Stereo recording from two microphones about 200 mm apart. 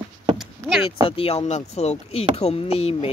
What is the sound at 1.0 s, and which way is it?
Speech, 30° left (ahead or behind).